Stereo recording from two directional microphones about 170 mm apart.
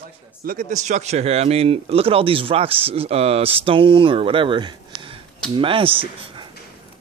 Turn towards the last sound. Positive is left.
turn(degrees=-30)  # may be behind; listen again after turning